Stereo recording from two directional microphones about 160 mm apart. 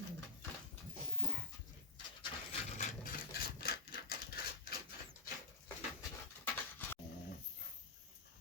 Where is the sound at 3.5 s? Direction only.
75° left (ahead or behind).